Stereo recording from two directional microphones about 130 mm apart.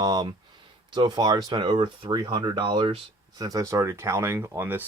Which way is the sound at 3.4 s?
25° right (ahead or behind).